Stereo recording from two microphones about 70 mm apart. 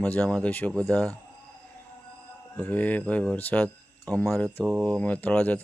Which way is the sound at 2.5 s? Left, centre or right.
Left.